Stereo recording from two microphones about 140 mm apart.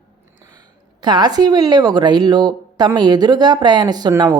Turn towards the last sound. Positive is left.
turn(degrees=-30)  # may be behind; listen again after turning